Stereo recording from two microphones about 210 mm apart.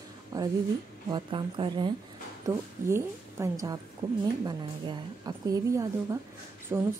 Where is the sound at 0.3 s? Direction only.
15° right (ahead or behind).